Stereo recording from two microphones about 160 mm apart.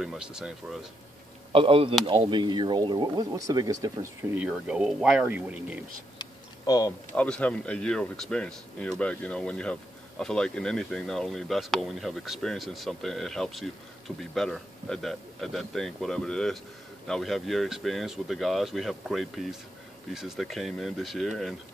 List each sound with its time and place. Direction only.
0.0 s speech: 5° right (ahead or behind)
1.5 s speech: 35° right (ahead or behind); by 5.9 s 10° right (ahead or behind)
6.1 s a sound: 25° left (ahead or behind)
7.2 s speech: 10° left (ahead or behind)